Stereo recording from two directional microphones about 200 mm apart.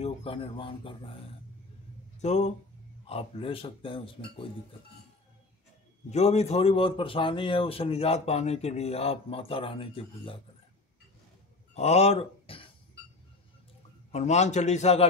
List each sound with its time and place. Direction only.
0.0 s speech: 30° left (ahead or behind)
2.2 s a man's voice: 35° left (ahead or behind)
6.0 s speech: 35° left (ahead or behind)
11.7 s a sound: 30° left (ahead or behind)
14.1 s a man's voice: 35° left (ahead or behind)